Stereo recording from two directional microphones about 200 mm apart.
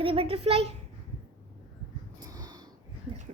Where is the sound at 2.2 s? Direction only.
20° right (ahead or behind).